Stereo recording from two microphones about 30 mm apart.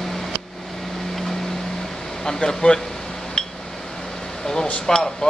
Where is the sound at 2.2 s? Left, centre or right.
Left.